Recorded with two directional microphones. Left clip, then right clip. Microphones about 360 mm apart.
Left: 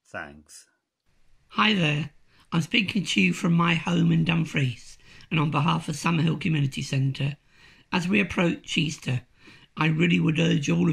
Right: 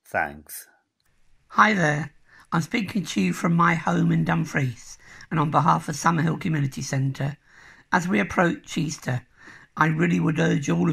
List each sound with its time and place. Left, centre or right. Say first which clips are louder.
0.1 s speech: right 11 dB; left
1.5 s speech: right 4 dB; centre